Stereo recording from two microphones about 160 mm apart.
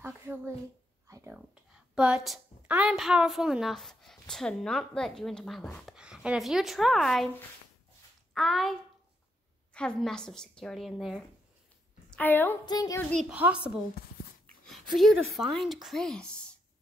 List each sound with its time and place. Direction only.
0.0 s a sound: 10° right (ahead or behind)
1.3 s a woman's voice: 5° right (ahead or behind)
8.4 s a woman's voice: centre (ahead or behind)
9.8 s a woman's voice: 5° left (ahead or behind)
12.1 s a woman's voice: 10° left (ahead or behind)
12.6 s speech: 25° left (ahead or behind)
13.1 s a woman's voice: centre (ahead or behind)
14.7 s a woman's voice: centre (ahead or behind)